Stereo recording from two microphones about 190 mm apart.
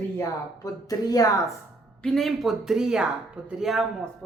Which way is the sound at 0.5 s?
20° left (ahead or behind).